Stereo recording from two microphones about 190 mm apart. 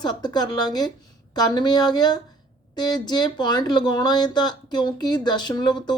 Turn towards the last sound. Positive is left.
turn(degrees=20)  # may be behind; listen again after turning